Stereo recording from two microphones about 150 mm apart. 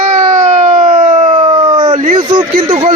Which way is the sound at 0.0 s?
60° right (ahead or behind).